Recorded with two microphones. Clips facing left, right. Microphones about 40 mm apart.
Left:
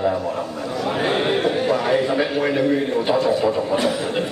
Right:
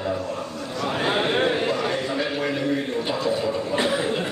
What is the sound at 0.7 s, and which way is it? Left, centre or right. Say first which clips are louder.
Speech: left 2 dB; centre.